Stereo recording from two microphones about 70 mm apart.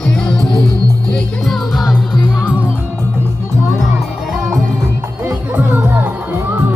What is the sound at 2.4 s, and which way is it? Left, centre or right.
Music, centre.